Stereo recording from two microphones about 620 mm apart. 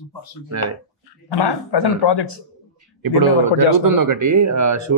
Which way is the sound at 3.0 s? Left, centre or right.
Right.